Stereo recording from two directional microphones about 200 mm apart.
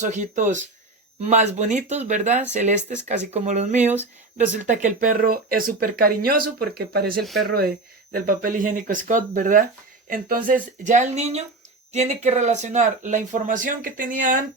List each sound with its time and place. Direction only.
0.0 s speech: 40° right (ahead or behind)
7.2 s speech: centre (ahead or behind)
8.1 s speech: 45° right (ahead or behind)